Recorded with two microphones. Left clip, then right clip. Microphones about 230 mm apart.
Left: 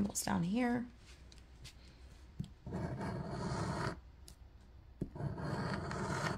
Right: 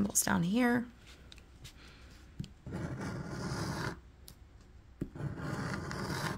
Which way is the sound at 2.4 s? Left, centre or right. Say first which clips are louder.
Right 1 dB; centre.